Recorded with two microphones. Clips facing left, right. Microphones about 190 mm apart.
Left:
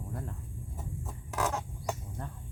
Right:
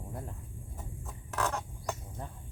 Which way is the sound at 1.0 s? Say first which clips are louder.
Left 1 dB; 5° left (ahead or behind).